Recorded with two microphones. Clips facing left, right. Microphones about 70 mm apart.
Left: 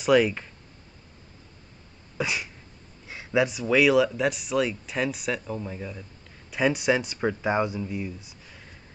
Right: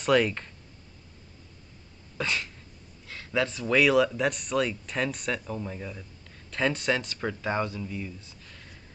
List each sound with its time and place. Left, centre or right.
0.0 s speech: centre
2.1 s cough: centre
3.1 s speech: centre
6.5 s speech: centre